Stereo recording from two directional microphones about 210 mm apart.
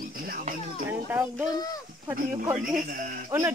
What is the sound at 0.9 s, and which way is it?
Speech, 10° right (ahead or behind).